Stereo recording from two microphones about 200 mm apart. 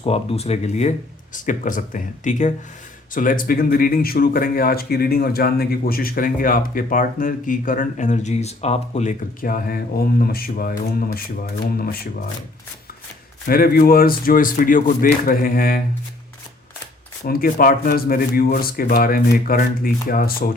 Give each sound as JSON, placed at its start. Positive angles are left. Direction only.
{"t": 0.0, "sound": "speech", "side_deg": 30}
{"t": 13.5, "sound": "speech", "side_deg": 45}
{"t": 17.2, "sound": "speech", "side_deg": 50}